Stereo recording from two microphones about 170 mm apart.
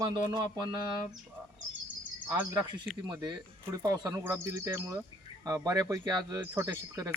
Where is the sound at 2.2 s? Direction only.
25° right (ahead or behind).